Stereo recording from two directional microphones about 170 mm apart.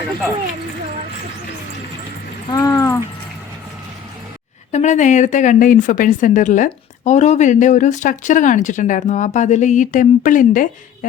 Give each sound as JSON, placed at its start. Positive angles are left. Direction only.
{"t": 2.5, "sound": "speech", "side_deg": 20}
{"t": 4.7, "sound": "a woman's voice", "side_deg": 45}